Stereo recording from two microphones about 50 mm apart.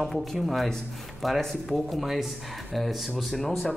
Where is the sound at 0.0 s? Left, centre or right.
Centre.